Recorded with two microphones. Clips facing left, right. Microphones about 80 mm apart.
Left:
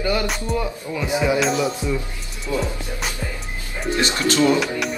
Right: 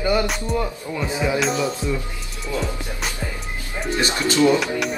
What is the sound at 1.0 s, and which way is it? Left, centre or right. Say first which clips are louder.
Speech: left 2 dB; centre.